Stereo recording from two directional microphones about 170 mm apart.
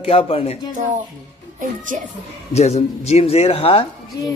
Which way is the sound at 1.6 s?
50° right (ahead or behind).